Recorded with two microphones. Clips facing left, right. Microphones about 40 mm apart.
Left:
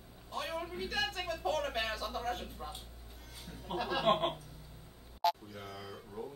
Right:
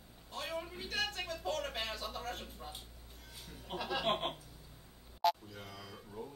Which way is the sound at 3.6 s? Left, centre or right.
Centre.